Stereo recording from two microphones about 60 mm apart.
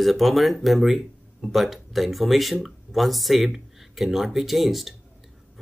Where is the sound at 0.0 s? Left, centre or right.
Centre.